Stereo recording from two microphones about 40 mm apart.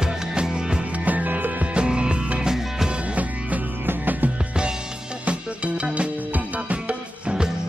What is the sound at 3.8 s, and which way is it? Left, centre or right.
Music, right.